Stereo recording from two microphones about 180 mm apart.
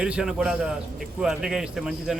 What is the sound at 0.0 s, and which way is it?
A man's voice, 5° right (ahead or behind).